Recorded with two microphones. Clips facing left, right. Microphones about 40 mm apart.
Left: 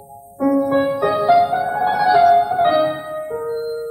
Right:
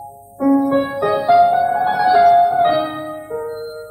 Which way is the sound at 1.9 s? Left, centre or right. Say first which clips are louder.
Even; centre.